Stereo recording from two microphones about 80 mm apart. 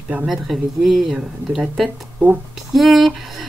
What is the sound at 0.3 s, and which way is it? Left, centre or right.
Speech, centre.